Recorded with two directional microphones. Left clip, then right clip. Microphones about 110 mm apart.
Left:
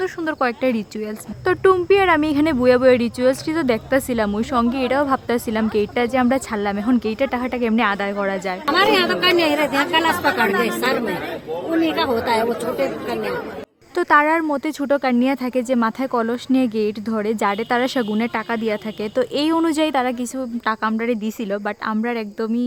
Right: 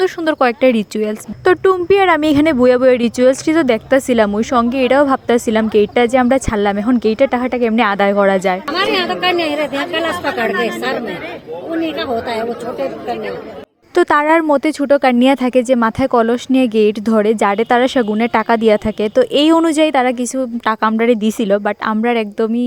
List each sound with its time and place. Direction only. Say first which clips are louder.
0.0 s speech: right 7 dB; 45° right (ahead or behind)
2.4 s speech: right 4 dB; 40° right (ahead or behind)
7.8 s speech: right 9 dB; 60° right (ahead or behind)
8.6 s a woman's voice: even; 5° left (ahead or behind)
10.2 s a woman's voice: right 1 dB; 15° left (ahead or behind)
11.7 s a woman's voice: even; 5° left (ahead or behind)
13.9 s speech: right 4 dB; 60° right (ahead or behind)
14.7 s speech: right 7 dB; 30° right (ahead or behind)
15.0 s speech: right 8 dB; 50° right (ahead or behind); by 18.2 s 30° right (ahead or behind)
18.2 s speech: right 9 dB; 60° right (ahead or behind)
19.1 s speech: right 8 dB; 35° right (ahead or behind)
20.7 s speech: right 7 dB; 50° right (ahead or behind)
21.5 s speech: right 7 dB; 35° right (ahead or behind)